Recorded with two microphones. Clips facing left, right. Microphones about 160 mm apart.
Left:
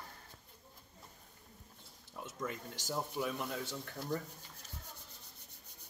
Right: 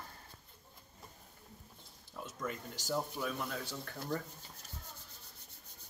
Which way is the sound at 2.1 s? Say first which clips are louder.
Even; 20° left (ahead or behind).